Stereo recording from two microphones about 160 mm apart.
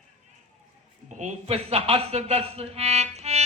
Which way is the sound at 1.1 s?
45° right (ahead or behind).